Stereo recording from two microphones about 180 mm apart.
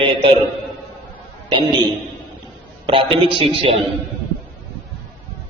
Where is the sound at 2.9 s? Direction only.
30° right (ahead or behind).